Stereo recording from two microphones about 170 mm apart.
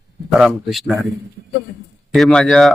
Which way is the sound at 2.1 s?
5° left (ahead or behind).